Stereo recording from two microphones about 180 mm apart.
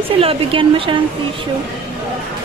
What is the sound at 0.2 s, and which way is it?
Speech, 30° right (ahead or behind).